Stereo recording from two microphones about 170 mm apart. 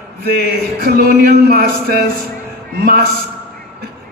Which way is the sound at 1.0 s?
65° right (ahead or behind).